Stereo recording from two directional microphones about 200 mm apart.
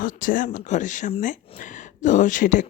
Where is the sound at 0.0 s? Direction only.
45° left (ahead or behind).